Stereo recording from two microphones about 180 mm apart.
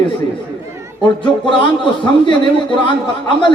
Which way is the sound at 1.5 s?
25° left (ahead or behind).